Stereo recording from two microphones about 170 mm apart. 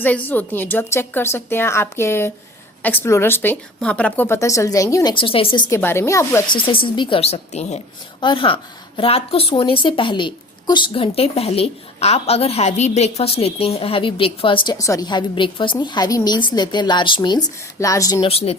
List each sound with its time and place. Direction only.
0.0 s a woman's voice: 10° left (ahead or behind)
5.1 s speech: 30° left (ahead or behind)
5.7 s a woman's voice: 15° left (ahead or behind)
6.6 s speech: 30° left (ahead or behind)
8.2 s speech: 30° left (ahead or behind)
14.8 s a woman's voice: 20° left (ahead or behind)
18.2 s speech: 35° left (ahead or behind)